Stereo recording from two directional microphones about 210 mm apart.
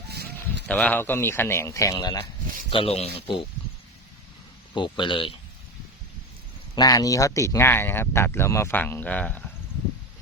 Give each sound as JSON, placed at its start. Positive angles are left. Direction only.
{"t": 0.1, "sound": "sheep", "side_deg": -50}
{"t": 0.7, "sound": "speech", "side_deg": 5}
{"t": 2.6, "sound": "speech", "side_deg": 25}
{"t": 4.7, "sound": "speech", "side_deg": 20}
{"t": 6.7, "sound": "speech", "side_deg": 15}